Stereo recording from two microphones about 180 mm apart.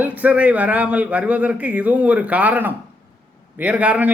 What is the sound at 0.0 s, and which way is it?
A man's voice, 10° right (ahead or behind).